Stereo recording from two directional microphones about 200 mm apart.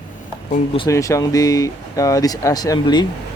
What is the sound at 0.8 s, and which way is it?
Speech, 15° left (ahead or behind).